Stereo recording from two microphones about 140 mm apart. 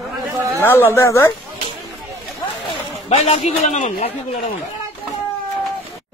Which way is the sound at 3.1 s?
50° left (ahead or behind).